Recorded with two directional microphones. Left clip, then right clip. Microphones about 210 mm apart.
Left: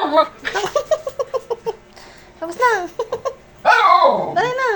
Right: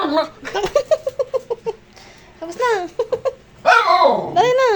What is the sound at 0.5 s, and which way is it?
Laughter, 25° right (ahead or behind).